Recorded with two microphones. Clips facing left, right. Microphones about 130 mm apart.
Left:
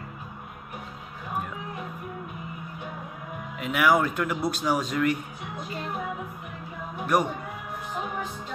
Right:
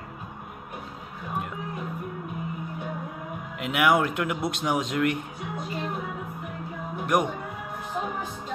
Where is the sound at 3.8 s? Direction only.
20° right (ahead or behind).